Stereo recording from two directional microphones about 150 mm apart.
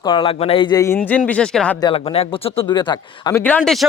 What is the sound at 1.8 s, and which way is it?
Speech, 40° left (ahead or behind).